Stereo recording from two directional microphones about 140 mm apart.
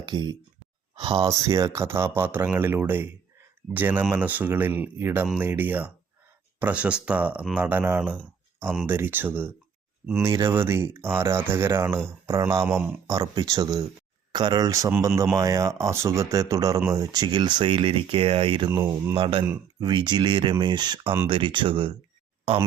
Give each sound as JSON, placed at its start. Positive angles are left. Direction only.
{"t": 0.0, "sound": "speech", "side_deg": -30}
{"t": 1.3, "sound": "speech", "side_deg": -25}
{"t": 12.6, "sound": "speech", "side_deg": -10}
{"t": 13.1, "sound": "speech", "side_deg": -25}
{"t": 18.8, "sound": "speech", "side_deg": -20}
{"t": 19.1, "sound": "speech", "side_deg": -35}